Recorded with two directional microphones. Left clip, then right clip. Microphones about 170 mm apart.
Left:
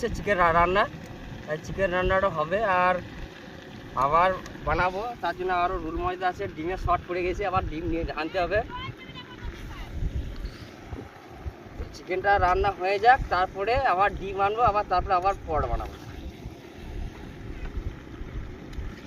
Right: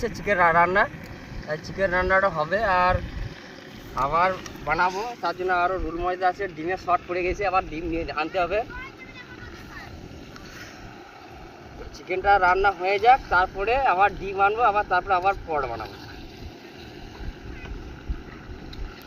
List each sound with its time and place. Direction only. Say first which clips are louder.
0.2 s speech: right 3 dB; 10° left (ahead or behind)
3.9 s speech: even; 30° left (ahead or behind)
12.0 s speech: right 3 dB; 35° left (ahead or behind)